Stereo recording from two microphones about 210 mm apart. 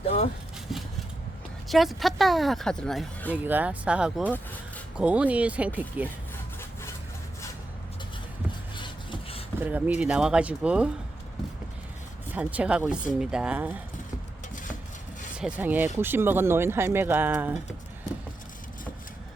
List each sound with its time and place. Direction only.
0.7 s a sound: centre (ahead or behind)
1.6 s speech: centre (ahead or behind)
3.3 s speech: 10° right (ahead or behind)
6.3 s sawing: 10° left (ahead or behind)
8.7 s a sound: 25° left (ahead or behind)
9.6 s speech: 10° right (ahead or behind)
12.3 s speech: 5° right (ahead or behind)
14.5 s a sound: 40° left (ahead or behind)
15.4 s speech: 5° right (ahead or behind)